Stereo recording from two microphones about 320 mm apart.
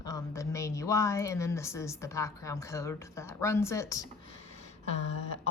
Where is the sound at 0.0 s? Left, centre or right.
Centre.